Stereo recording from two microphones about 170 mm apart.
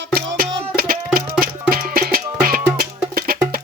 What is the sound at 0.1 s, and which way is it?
Music, 60° right (ahead or behind).